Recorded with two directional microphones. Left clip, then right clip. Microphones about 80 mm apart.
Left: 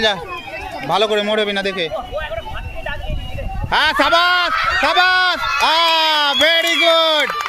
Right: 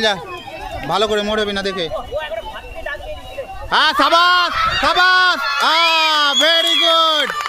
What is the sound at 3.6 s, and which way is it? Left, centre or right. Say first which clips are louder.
A man's voice: right 1 dB; right.